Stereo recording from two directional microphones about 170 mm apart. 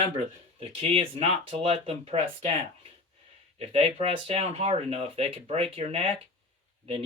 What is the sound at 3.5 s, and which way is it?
Speech, 35° right (ahead or behind).